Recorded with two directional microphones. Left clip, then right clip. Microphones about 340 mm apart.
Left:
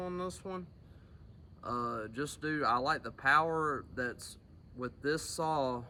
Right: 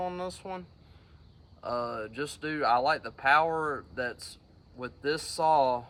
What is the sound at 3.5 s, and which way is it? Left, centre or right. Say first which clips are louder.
Speech: right 3 dB; right.